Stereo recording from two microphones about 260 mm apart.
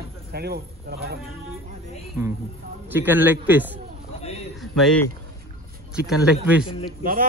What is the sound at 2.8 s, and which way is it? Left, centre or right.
Speech, centre.